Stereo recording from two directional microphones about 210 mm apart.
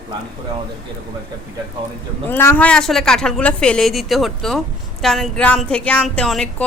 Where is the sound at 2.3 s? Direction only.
10° left (ahead or behind).